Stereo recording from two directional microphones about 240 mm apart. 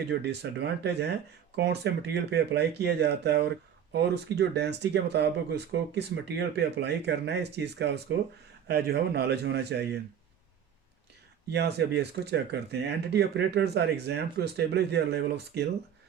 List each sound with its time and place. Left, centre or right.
0.1 s speech: right
11.5 s speech: right